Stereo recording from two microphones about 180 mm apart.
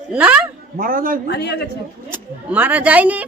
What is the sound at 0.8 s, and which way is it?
Speech, 50° right (ahead or behind).